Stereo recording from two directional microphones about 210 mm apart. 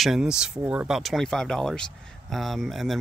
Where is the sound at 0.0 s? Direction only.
5° right (ahead or behind).